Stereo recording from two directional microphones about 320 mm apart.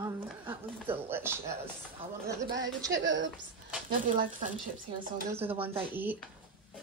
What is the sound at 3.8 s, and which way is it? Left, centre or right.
A woman's voice, right.